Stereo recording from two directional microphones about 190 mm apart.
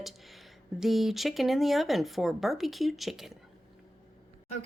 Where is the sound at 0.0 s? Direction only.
Centre (ahead or behind).